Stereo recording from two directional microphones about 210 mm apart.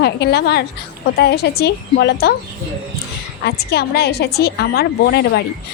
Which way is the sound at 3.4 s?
50° left (ahead or behind).